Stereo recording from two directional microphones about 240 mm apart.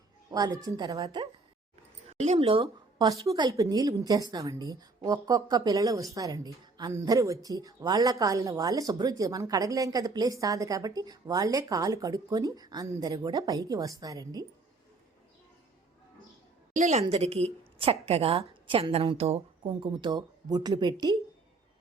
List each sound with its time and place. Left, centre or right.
0.3 s a woman's voice: centre
2.1 s a woman's voice: right
16.7 s a woman's voice: right